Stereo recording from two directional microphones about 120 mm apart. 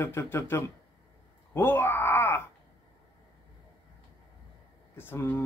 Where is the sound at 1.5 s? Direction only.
15° left (ahead or behind).